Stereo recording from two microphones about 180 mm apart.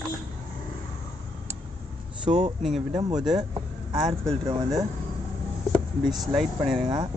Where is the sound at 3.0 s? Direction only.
25° right (ahead or behind).